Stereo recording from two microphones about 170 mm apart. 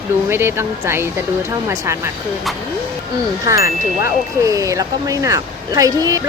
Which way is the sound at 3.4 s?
20° right (ahead or behind).